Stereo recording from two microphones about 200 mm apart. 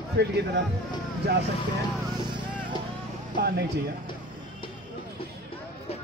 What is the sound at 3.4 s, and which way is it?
Speech, 50° right (ahead or behind).